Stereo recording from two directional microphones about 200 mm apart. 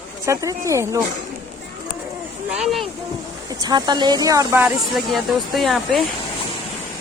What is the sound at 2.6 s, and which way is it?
Speech, centre (ahead or behind).